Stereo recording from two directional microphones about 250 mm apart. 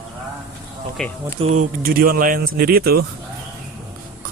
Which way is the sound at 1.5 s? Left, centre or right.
Right.